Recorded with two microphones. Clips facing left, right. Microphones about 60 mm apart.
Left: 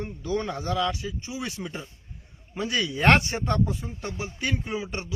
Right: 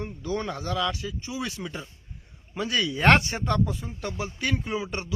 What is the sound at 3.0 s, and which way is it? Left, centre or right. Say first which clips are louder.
Speech: even; right.